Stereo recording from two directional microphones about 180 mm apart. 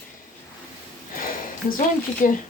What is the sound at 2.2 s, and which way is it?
Speech, 45° left (ahead or behind).